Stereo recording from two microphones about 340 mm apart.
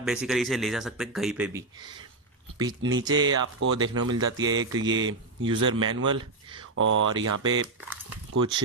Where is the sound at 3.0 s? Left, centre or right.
Centre.